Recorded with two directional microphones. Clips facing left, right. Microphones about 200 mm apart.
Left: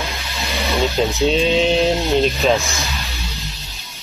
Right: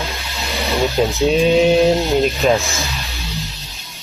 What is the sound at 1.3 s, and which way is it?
Mantra, 15° right (ahead or behind).